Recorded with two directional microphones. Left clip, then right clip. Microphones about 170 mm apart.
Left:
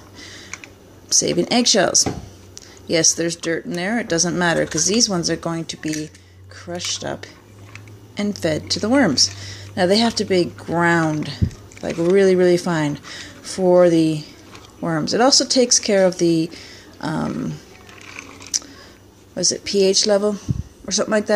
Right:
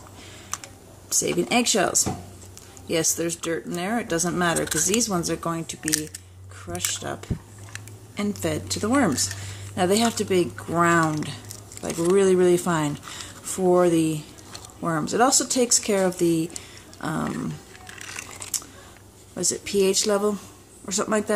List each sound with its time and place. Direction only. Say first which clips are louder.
1.0 s speech: left 6 dB; 20° left (ahead or behind)
8.5 s speech: left 7 dB; 10° right (ahead or behind)
8.8 s speech: left 6 dB; 15° left (ahead or behind)
19.5 s speech: left 4 dB; 5° left (ahead or behind)